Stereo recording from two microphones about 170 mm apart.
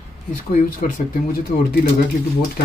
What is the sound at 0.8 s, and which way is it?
Speech, 50° left (ahead or behind).